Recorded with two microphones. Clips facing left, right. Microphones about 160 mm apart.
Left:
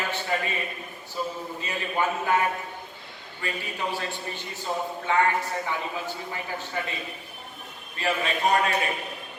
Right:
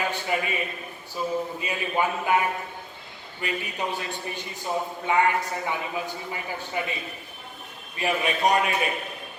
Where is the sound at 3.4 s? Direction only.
20° right (ahead or behind).